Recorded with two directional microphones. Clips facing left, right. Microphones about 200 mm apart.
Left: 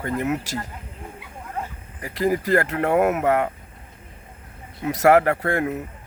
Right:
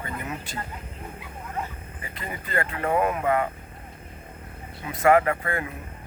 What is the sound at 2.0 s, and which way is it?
Speech, 80° left.